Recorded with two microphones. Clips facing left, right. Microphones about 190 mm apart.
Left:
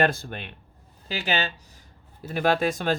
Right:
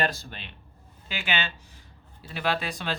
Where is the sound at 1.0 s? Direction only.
40° left (ahead or behind).